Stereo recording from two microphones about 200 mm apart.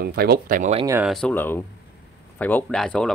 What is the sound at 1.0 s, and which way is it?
Speech, centre (ahead or behind).